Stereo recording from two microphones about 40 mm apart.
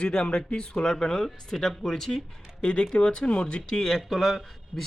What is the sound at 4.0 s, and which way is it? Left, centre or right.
Speech, centre.